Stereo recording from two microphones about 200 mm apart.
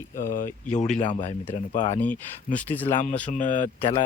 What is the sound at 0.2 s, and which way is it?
Speech, 45° left (ahead or behind).